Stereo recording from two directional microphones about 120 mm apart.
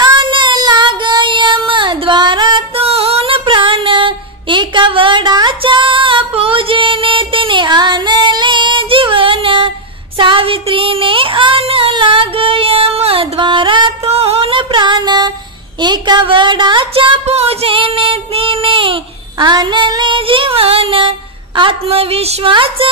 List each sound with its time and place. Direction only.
0.0 s child singing: 40° right (ahead or behind)
2.7 s female singing: 55° right (ahead or behind)
10.1 s a sound: 45° right (ahead or behind)
14.0 s music: 60° right (ahead or behind); by 15.3 s 35° right (ahead or behind)
15.8 s a sound: 40° right (ahead or behind); by 22.5 s 55° right (ahead or behind)
22.5 s speech: 45° right (ahead or behind)